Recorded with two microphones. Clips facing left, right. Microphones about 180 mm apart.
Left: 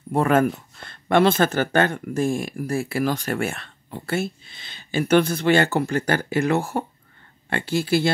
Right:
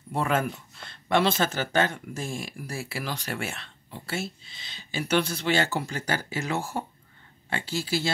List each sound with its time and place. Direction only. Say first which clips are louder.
0.1 s speech: left 8 dB; 50° left (ahead or behind)